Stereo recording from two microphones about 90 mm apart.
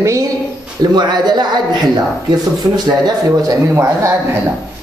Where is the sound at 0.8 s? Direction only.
50° right (ahead or behind).